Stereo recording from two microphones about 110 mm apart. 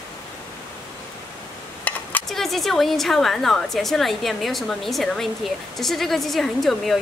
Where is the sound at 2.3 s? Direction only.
Centre (ahead or behind).